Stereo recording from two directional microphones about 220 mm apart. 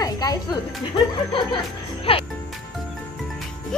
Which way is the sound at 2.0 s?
25° left (ahead or behind).